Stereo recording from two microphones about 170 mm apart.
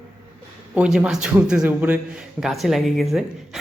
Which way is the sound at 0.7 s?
5° right (ahead or behind).